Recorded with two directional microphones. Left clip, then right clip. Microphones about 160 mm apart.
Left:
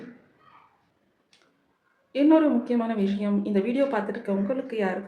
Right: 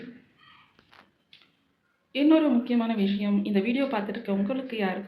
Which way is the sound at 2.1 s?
10° left (ahead or behind).